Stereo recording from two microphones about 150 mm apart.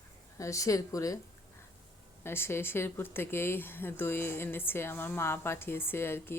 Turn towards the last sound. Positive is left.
turn(degrees=15)  # may be behind; listen again after turning